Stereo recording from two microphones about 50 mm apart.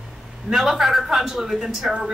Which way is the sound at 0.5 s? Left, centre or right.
Centre.